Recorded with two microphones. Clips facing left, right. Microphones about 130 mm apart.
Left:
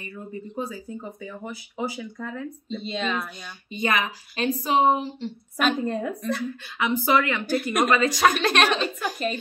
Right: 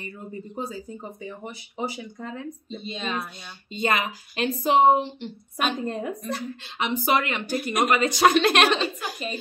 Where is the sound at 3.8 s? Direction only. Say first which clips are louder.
Even; 25° right (ahead or behind).